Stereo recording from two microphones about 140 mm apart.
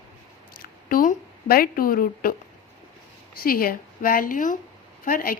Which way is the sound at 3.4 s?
90° left.